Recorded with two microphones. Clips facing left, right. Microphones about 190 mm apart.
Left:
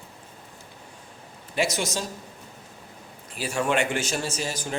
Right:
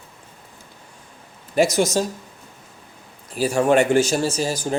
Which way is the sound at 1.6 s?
40° right (ahead or behind).